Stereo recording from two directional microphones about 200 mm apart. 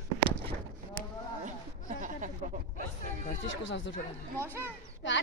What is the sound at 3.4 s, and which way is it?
Speech, 70° left (ahead or behind).